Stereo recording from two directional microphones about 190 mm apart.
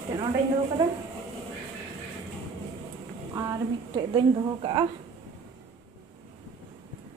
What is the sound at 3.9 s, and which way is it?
Speech, 25° right (ahead or behind).